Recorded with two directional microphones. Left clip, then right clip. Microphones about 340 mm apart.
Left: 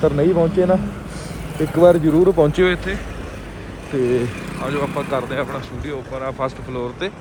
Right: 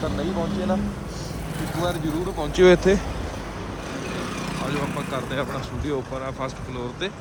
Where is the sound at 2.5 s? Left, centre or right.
Centre.